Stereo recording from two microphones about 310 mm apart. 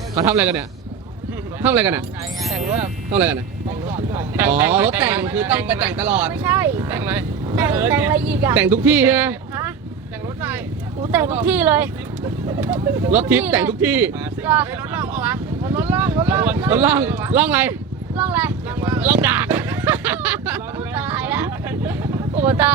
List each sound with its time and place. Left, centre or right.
0.1 s speech: centre
1.6 s speech: centre
2.6 s speech: right
3.2 s speech: centre
11.1 s speech: centre